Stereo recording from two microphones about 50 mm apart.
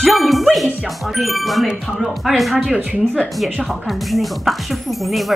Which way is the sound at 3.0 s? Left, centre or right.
Centre.